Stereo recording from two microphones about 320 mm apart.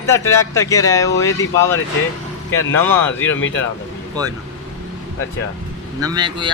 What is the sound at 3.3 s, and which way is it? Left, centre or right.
Speech, left.